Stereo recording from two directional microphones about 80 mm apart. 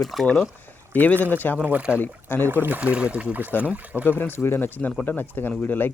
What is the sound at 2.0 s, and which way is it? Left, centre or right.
Speech, left.